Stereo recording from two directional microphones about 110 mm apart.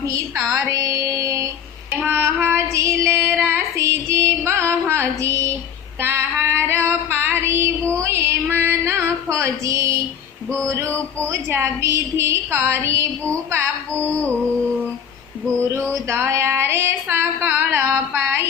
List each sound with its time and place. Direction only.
0.7 s music: 30° right (ahead or behind)
1.9 s child singing: 15° right (ahead or behind)
6.0 s female singing: 20° right (ahead or behind)
8.0 s music: 20° right (ahead or behind)
10.7 s male singing: 25° right (ahead or behind)
11.3 s a woman's voice: 25° right (ahead or behind)
13.9 s music: 15° left (ahead or behind)
15.4 s a woman's voice: 25° right (ahead or behind)
15.9 s a sound: 25° right (ahead or behind)